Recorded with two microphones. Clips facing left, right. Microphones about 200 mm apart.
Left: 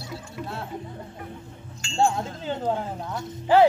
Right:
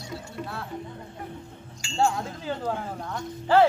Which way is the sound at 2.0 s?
25° left (ahead or behind).